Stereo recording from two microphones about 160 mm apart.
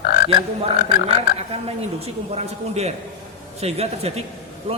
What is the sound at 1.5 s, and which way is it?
A man's voice, 40° right (ahead or behind).